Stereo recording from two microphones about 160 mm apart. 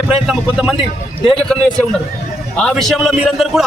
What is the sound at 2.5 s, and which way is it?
A man's voice, centre (ahead or behind).